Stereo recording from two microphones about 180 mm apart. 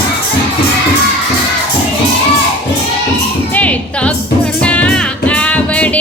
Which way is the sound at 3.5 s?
5° left (ahead or behind).